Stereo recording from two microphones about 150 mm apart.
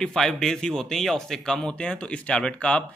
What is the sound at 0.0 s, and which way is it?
A man's voice, 5° left (ahead or behind).